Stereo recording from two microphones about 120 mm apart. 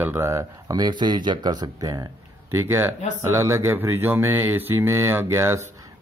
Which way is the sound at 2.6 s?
20° right (ahead or behind).